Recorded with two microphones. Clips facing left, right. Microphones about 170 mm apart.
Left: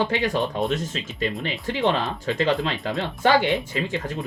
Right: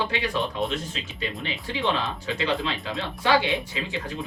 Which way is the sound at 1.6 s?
45° left (ahead or behind).